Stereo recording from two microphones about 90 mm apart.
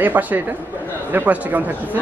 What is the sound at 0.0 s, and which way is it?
A man's voice, 20° right (ahead or behind).